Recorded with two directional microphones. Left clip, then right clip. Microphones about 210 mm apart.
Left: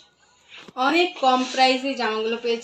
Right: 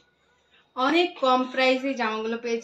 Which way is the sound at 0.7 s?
10° right (ahead or behind).